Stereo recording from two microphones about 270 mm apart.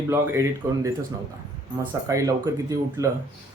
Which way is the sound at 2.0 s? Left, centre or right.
Centre.